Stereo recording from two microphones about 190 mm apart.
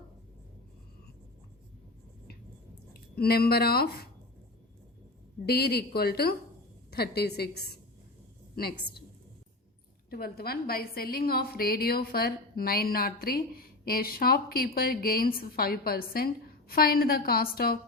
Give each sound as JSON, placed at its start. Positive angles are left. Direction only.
{"t": 2.9, "sound": "speech", "side_deg": 55}
{"t": 5.5, "sound": "speech", "side_deg": 55}
{"t": 10.1, "sound": "a woman's voice", "side_deg": 55}